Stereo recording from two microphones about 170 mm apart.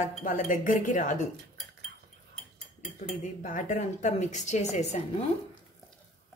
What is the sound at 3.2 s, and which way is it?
Speech, 50° left (ahead or behind).